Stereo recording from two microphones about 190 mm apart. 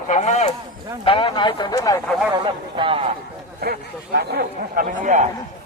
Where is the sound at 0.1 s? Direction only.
40° left (ahead or behind); by 2.0 s 20° left (ahead or behind).